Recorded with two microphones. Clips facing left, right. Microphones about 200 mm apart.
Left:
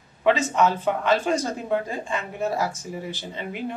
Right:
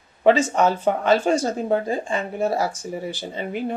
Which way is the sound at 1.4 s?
35° right (ahead or behind).